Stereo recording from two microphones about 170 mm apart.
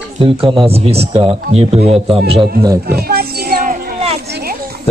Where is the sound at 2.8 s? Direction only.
65° right (ahead or behind).